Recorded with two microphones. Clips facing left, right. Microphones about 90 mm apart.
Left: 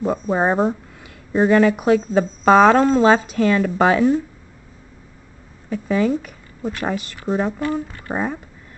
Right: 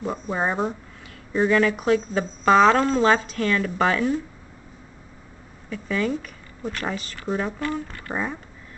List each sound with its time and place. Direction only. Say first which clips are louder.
0.0 s speech: left 6 dB; 20° left (ahead or behind)
3.0 s speech: left 5 dB; 15° left (ahead or behind)
5.7 s speech: left 6 dB; 15° left (ahead or behind)